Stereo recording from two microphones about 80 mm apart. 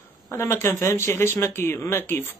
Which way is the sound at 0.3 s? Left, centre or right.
Left.